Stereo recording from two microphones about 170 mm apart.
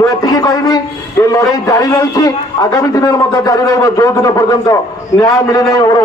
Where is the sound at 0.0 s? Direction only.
20° left (ahead or behind).